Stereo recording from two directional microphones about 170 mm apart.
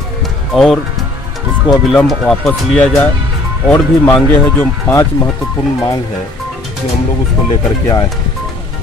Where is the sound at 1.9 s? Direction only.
Centre (ahead or behind); by 5.3 s 15° left (ahead or behind).